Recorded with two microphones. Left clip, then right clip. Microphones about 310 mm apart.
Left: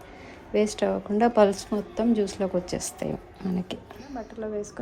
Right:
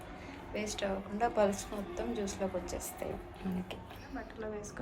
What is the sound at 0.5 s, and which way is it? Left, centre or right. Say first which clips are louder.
A woman's voice: left 12 dB; left.